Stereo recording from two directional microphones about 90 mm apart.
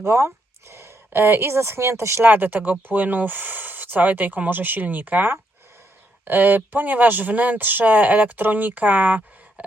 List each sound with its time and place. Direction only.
0.0 s speech: 30° right (ahead or behind)